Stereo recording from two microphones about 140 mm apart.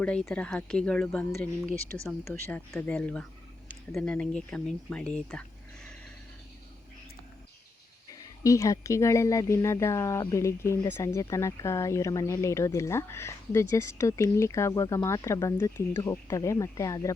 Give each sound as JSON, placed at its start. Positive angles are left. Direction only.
{"t": 0.0, "sound": "speech", "side_deg": 5}
{"t": 2.7, "sound": "speech", "side_deg": 10}
{"t": 8.1, "sound": "speech", "side_deg": 25}